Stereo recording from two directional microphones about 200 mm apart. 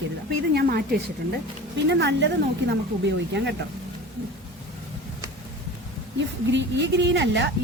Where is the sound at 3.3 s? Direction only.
60° right (ahead or behind).